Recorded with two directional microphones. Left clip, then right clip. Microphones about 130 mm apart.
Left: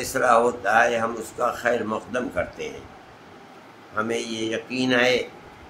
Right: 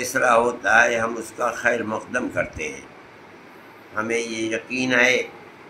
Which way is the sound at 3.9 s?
20° left (ahead or behind).